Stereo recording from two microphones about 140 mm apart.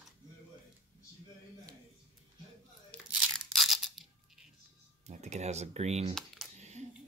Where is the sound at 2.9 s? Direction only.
10° left (ahead or behind).